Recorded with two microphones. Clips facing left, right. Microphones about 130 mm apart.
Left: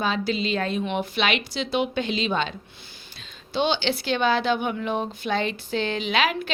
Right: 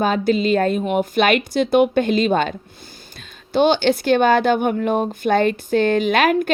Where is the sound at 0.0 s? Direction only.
50° right (ahead or behind).